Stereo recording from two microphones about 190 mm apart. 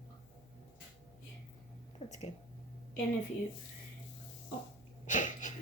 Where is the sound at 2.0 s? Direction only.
35° left (ahead or behind).